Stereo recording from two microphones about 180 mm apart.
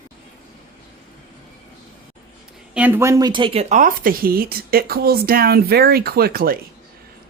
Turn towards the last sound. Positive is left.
turn(degrees=-55)  # may be behind; listen again after turning